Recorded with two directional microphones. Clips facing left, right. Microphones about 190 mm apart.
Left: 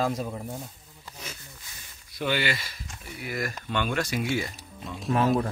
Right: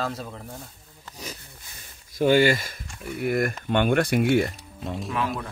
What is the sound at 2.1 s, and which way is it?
Speech, 45° right (ahead or behind).